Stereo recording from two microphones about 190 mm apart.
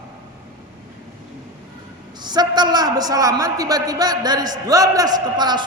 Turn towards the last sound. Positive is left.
turn(degrees=-20)  # may be behind; listen again after turning